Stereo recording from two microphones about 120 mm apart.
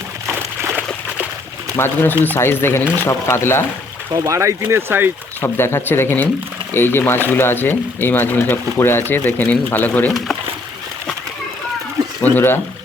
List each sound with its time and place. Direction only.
0.3 s a sound: 20° right (ahead or behind)
1.7 s speech: 20° left (ahead or behind)
4.1 s speech: 30° right (ahead or behind)
5.4 s speech: 20° left (ahead or behind)
12.2 s speech: 15° left (ahead or behind)